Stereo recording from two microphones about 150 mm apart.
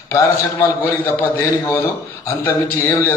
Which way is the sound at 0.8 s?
20° left (ahead or behind).